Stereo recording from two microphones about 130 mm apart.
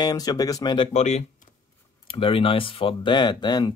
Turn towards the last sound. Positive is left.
turn(degrees=35)  # may be behind; listen again after turning